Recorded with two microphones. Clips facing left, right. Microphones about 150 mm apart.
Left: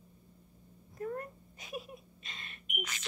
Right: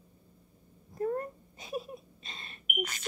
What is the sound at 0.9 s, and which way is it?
Wail, 35° right (ahead or behind).